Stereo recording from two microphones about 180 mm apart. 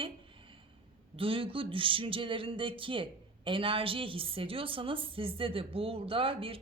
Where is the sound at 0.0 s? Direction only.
30° right (ahead or behind).